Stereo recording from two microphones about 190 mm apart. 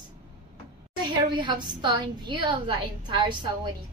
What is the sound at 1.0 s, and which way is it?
A woman's voice, 25° right (ahead or behind).